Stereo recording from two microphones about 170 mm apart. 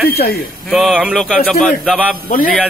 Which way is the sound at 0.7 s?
Centre (ahead or behind).